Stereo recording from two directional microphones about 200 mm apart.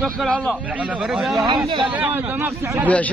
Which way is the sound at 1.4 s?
25° right (ahead or behind).